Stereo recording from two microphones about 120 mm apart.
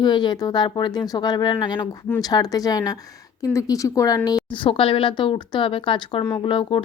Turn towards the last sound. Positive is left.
turn(degrees=45)  # may be behind; listen again after turning